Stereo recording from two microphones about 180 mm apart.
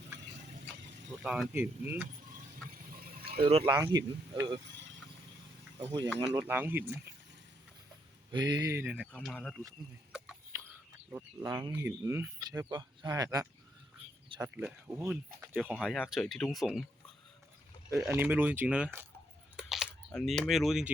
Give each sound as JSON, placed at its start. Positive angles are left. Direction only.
{"t": 1.2, "sound": "speech", "side_deg": 0}
{"t": 2.9, "sound": "a sound", "side_deg": -55}
{"t": 3.4, "sound": "speech", "side_deg": -30}
{"t": 3.8, "sound": "speech", "side_deg": -20}
{"t": 6.5, "sound": "speech", "side_deg": -10}
{"t": 8.3, "sound": "speech", "side_deg": -25}
{"t": 10.1, "sound": "chicken", "side_deg": -5}
{"t": 11.1, "sound": "speech", "side_deg": -10}
{"t": 14.5, "sound": "speech", "side_deg": -10}
{"t": 17.9, "sound": "speech", "side_deg": -10}
{"t": 19.5, "sound": "chewing", "side_deg": 0}
{"t": 20.1, "sound": "speech", "side_deg": 5}